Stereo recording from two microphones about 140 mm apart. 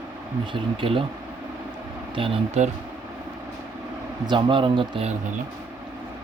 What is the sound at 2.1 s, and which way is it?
Speech, 40° right (ahead or behind).